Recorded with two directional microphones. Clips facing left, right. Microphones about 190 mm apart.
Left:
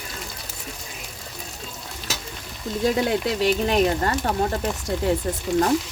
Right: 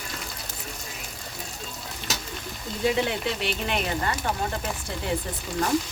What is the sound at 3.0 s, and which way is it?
Speech, 40° left (ahead or behind).